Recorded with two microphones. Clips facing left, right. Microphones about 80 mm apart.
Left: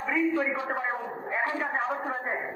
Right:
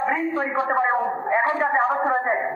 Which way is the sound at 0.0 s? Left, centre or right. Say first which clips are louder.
Right 3 dB; right.